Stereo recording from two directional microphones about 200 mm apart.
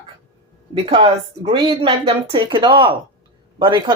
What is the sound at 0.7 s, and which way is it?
Speech, 30° right (ahead or behind).